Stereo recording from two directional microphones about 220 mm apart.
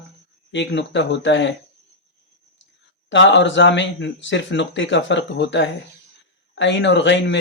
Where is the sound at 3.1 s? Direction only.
55° left (ahead or behind).